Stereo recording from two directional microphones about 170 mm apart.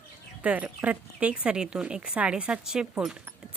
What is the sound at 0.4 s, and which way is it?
Speech, 10° right (ahead or behind).